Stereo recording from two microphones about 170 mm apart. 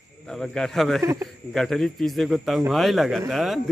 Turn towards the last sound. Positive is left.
turn(degrees=0)  # may be behind; listen again after turning